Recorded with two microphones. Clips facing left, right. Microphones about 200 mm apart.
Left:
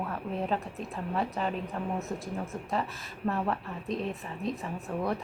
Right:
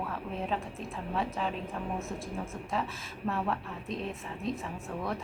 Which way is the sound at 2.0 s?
20° left (ahead or behind).